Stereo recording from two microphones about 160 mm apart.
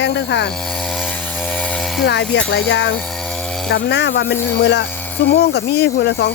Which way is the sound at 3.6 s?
90° left.